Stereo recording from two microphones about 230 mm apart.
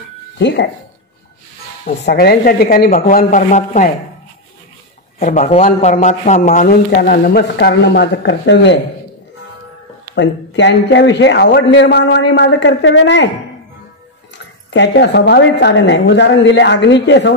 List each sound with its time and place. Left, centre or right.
0.4 s a man's voice: left
2.0 s speech: left
5.2 s speech: left
10.1 s a man's voice: left
14.7 s a man's voice: left